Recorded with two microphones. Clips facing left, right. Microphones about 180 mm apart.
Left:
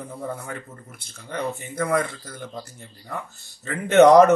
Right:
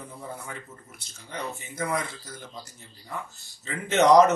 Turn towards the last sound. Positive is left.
turn(degrees=55)  # may be behind; listen again after turning